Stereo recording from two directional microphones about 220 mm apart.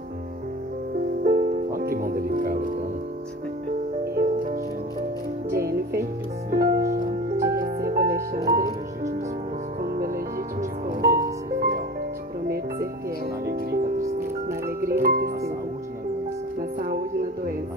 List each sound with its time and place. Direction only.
1.2 s music: 40° right (ahead or behind)
4.0 s music: 40° right (ahead or behind)
6.5 s music: 45° right (ahead or behind)
7.3 s music: 15° right (ahead or behind)
7.9 s music: 40° right (ahead or behind)
8.4 s music: 15° right (ahead or behind)
9.8 s music: 40° right (ahead or behind)
13.5 s music: 45° right (ahead or behind)